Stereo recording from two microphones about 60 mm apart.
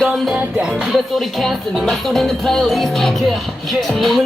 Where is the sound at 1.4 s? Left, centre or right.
Centre.